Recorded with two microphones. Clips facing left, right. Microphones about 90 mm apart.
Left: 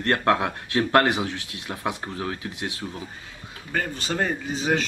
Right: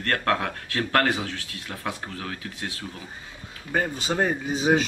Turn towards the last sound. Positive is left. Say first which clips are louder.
# right 3 dB
turn(degrees=-10)  # may be behind; listen again after turning